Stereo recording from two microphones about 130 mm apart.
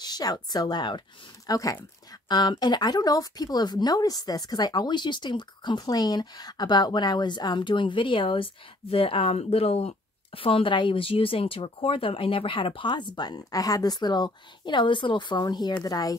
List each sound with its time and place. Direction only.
0.0 s speech: 30° left (ahead or behind)